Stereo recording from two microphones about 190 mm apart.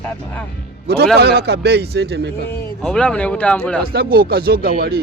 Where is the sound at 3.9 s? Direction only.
55° right (ahead or behind).